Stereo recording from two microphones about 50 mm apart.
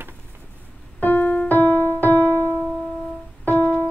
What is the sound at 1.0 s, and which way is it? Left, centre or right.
Music, left.